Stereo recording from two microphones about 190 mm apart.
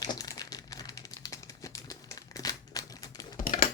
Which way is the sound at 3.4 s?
50° left (ahead or behind).